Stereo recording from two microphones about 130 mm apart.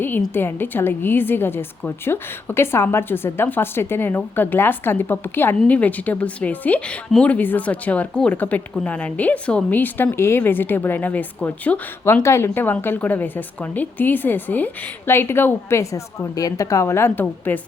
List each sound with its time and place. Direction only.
0.3 s a woman's voice: 15° left (ahead or behind)